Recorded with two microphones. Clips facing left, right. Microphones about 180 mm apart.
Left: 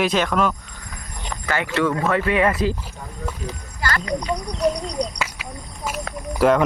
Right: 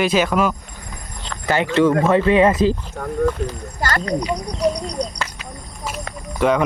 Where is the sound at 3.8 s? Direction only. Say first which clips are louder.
Right 3 dB; 40° right (ahead or behind).